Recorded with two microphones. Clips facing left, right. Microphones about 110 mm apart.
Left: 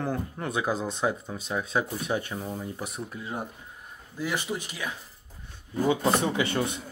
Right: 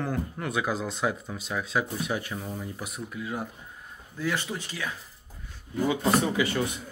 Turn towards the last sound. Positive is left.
turn(degrees=30)  # may be behind; listen again after turning